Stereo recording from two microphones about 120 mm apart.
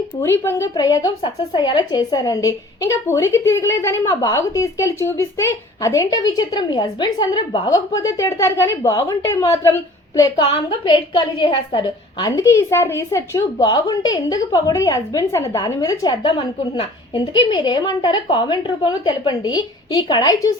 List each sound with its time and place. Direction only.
0.2 s speech: 20° left (ahead or behind)
10.5 s a woman's voice: 40° left (ahead or behind); by 13.4 s 25° left (ahead or behind)
13.6 s a woman's voice: 35° left (ahead or behind)